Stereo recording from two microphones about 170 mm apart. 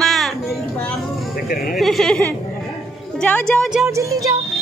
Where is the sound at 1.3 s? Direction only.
60° left (ahead or behind).